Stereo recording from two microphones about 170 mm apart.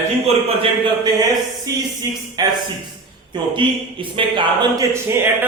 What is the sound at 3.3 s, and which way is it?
Speech, 30° right (ahead or behind).